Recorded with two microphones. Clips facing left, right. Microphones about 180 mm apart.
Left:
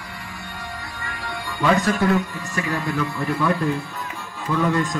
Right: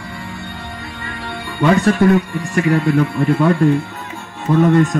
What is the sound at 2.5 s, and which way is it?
Speech, 65° right (ahead or behind).